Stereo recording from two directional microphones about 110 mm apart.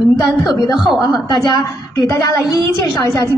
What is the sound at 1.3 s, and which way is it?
A woman's voice, 40° left (ahead or behind).